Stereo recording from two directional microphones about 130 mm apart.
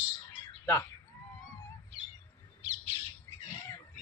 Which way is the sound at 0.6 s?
15° left (ahead or behind).